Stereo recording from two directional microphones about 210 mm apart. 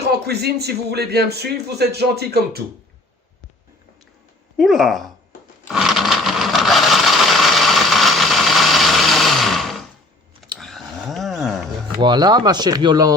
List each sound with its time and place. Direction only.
0.0 s a man's voice: 50° right (ahead or behind)
4.5 s speech: centre (ahead or behind)
5.7 s a sound: centre (ahead or behind)
11.9 s speech: 20° right (ahead or behind)